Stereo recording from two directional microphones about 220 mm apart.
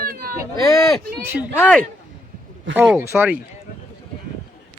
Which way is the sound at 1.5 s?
10° left (ahead or behind).